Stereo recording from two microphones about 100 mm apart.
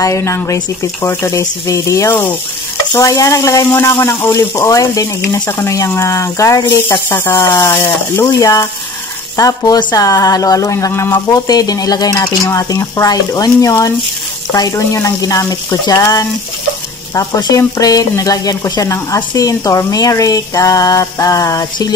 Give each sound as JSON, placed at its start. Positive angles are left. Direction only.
{"t": 0.0, "sound": "speech", "side_deg": 30}
{"t": 10.9, "sound": "speech", "side_deg": 20}
{"t": 11.4, "sound": "speech", "side_deg": 40}